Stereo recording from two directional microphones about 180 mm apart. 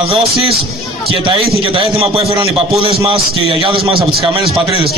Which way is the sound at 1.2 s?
30° right (ahead or behind).